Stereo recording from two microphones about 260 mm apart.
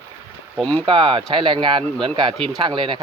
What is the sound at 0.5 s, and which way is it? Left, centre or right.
Speech, centre.